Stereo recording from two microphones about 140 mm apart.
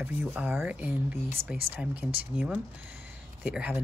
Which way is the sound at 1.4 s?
45° right (ahead or behind).